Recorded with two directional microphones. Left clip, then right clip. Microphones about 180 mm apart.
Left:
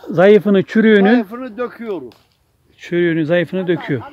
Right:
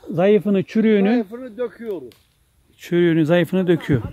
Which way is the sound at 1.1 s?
55° left (ahead or behind).